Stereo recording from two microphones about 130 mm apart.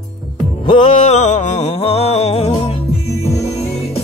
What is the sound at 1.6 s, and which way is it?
Music, 50° left (ahead or behind).